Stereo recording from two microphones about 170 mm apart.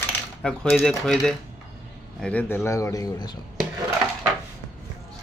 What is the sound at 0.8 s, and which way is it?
A man's voice, 5° left (ahead or behind).